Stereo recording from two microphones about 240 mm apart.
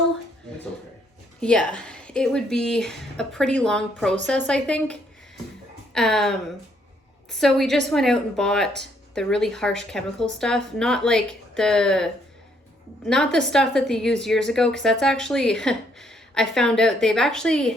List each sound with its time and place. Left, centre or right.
1.4 s a woman's voice: centre